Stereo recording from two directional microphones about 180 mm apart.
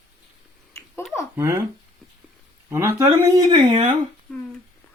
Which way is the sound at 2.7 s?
15° right (ahead or behind).